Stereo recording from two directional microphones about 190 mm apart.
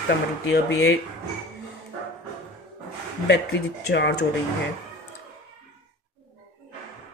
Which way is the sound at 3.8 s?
60° left (ahead or behind).